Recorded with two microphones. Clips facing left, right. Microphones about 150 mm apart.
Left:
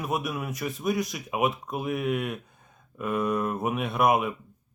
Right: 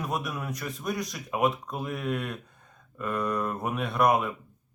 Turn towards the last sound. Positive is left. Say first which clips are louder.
# left 1 dB
turn(degrees=10)  # may be behind; listen again after turning